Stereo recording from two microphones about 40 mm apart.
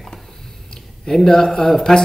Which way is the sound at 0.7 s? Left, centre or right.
Centre.